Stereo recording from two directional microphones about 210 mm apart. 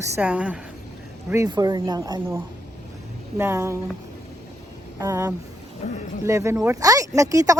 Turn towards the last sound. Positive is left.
turn(degrees=-15)  # may be behind; listen again after turning